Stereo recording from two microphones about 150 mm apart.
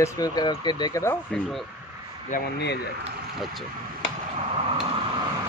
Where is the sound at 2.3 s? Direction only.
90° left.